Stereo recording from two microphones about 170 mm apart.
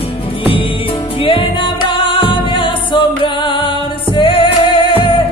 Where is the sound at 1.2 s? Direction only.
30° left (ahead or behind).